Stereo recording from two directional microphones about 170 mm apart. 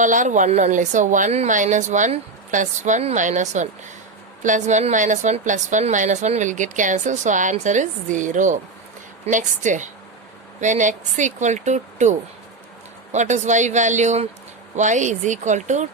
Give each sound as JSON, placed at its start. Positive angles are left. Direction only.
{"t": 0.0, "sound": "a woman's voice", "side_deg": -50}